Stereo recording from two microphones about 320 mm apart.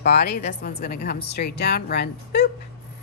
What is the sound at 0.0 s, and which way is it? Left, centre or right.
A woman's voice, left.